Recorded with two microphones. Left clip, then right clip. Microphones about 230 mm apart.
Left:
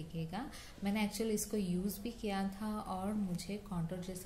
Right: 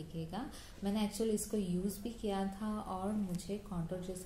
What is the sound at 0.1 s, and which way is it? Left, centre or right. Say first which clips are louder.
A woman's voice: even; left.